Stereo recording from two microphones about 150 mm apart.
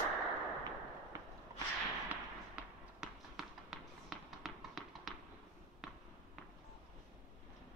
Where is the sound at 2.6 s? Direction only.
10° right (ahead or behind).